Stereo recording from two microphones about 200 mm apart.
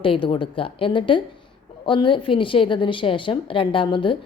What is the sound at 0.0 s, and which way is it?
A woman's voice, 25° left (ahead or behind).